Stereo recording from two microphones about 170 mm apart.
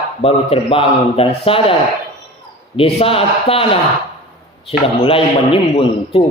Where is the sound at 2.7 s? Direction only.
35° left (ahead or behind).